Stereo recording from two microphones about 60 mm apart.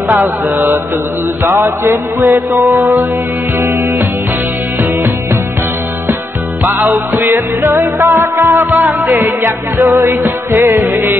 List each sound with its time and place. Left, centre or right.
1.4 s music: right
7.3 s music: right